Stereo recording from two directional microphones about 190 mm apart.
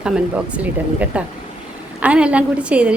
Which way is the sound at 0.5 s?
10° right (ahead or behind).